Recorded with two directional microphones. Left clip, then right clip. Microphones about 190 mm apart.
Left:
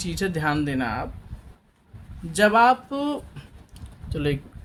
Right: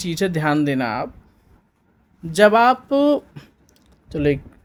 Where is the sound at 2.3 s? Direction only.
45° right (ahead or behind).